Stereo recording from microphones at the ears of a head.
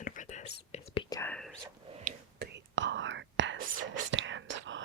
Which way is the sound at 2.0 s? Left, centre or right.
Right.